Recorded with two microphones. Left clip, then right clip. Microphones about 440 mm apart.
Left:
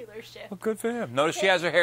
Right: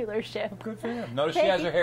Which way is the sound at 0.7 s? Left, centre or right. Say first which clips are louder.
Left 5 dB; left.